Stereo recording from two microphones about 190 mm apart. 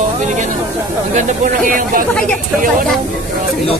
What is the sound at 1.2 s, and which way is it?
Speech, 45° right (ahead or behind).